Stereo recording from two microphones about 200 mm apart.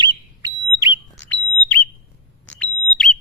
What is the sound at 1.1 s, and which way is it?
Bird, 5° left (ahead or behind).